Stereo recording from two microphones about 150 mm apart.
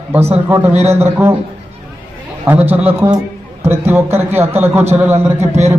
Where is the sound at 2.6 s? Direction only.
15° right (ahead or behind).